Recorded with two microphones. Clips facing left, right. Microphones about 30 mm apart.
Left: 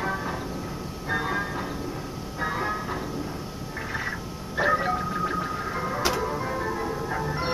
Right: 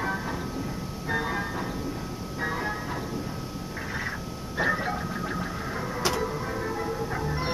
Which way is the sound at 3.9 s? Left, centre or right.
Centre.